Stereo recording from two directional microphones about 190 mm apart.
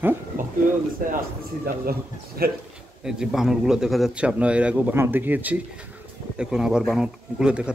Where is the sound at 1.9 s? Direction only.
50° right (ahead or behind).